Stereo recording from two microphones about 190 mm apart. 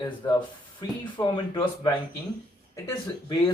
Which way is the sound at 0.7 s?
25° left (ahead or behind).